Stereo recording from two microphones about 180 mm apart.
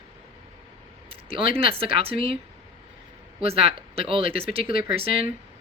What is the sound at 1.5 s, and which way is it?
Speech, 30° right (ahead or behind).